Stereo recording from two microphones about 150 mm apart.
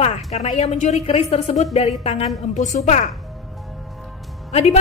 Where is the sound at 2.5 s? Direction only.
55° left (ahead or behind).